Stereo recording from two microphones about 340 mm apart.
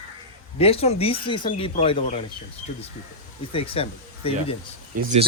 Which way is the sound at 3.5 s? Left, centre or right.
Centre.